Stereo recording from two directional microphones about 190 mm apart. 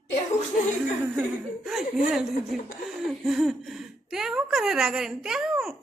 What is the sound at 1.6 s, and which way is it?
Speech, centre (ahead or behind).